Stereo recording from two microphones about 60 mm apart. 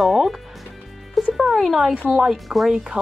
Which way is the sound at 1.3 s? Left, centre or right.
Centre.